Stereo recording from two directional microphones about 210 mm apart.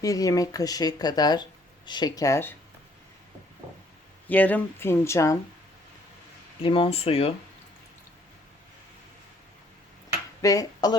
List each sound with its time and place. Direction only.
0.0 s speech: 15° left (ahead or behind)
4.3 s speech: 10° left (ahead or behind)
6.6 s speech: 25° left (ahead or behind)
10.4 s speech: 15° left (ahead or behind)